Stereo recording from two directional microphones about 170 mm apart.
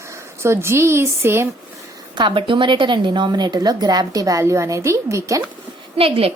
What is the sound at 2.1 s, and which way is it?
A woman's voice, 30° right (ahead or behind).